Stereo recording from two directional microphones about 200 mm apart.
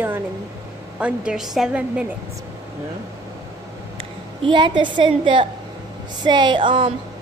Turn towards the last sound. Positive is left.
turn(degrees=-25)  # may be behind; listen again after turning